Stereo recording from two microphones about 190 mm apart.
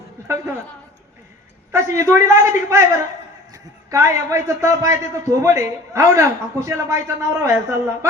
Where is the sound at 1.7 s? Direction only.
15° right (ahead or behind).